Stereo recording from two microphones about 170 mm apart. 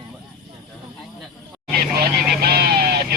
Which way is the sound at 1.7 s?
65° right (ahead or behind).